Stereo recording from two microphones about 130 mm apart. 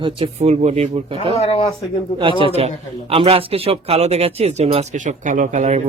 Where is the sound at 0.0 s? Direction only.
50° right (ahead or behind).